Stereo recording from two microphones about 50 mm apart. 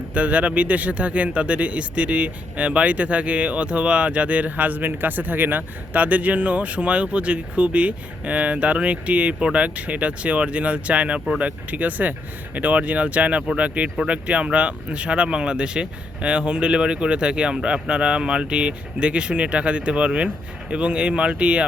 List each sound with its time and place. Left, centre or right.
0.1 s speech: right